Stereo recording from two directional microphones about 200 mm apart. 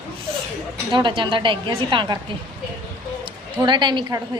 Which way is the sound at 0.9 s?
25° right (ahead or behind).